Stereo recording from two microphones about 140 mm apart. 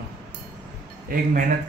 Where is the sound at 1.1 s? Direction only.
90° right.